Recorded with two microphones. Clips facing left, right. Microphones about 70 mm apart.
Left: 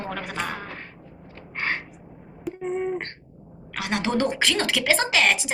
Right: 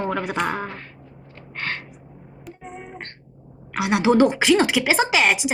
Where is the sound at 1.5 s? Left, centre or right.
Centre.